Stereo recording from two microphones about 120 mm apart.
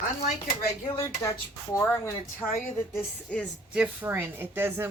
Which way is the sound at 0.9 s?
25° left (ahead or behind).